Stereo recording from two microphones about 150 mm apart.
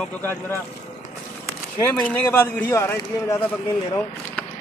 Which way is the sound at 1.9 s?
10° left (ahead or behind).